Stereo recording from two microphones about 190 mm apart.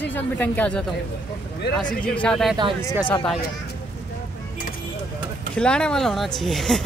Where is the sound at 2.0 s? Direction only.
5° left (ahead or behind).